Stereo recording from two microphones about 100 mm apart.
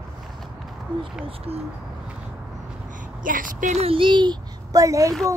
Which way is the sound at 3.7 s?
70° right (ahead or behind).